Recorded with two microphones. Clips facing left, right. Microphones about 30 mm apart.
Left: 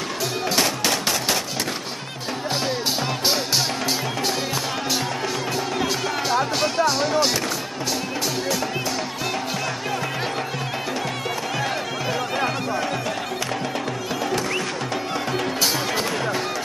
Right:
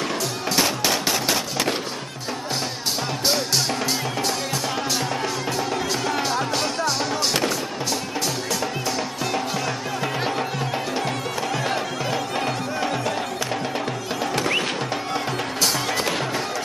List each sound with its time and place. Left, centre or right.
0.6 s machine gun: centre
5.8 s music: centre